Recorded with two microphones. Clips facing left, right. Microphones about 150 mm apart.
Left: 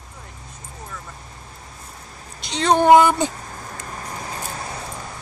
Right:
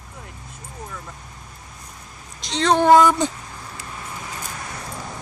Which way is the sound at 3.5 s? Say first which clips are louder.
Left 2 dB; 45° left (ahead or behind).